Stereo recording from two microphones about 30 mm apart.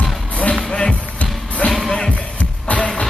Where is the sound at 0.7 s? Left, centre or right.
Left.